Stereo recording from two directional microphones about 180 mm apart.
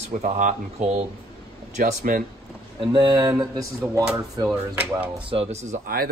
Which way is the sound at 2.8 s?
25° right (ahead or behind).